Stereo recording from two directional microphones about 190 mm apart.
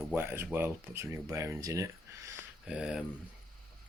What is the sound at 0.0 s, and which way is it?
Speech, 5° right (ahead or behind).